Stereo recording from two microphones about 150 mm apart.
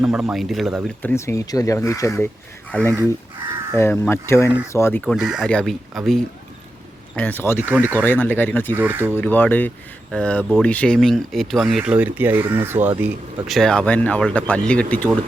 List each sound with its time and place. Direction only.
0.0 s speech: 5° right (ahead or behind)
1.0 s speech: 20° left (ahead or behind)
2.8 s speech: 20° right (ahead or behind)
3.8 s speech: 15° left (ahead or behind)
5.0 s speech: centre (ahead or behind)
7.2 s speech: 10° left (ahead or behind)
7.6 s speech: 15° right (ahead or behind)
7.9 s speech: 15° left (ahead or behind)
8.7 s speech: 15° right (ahead or behind)
9.1 s speech: 10° left (ahead or behind); by 12.9 s 15° right (ahead or behind)
13.5 s speech: 5° left (ahead or behind)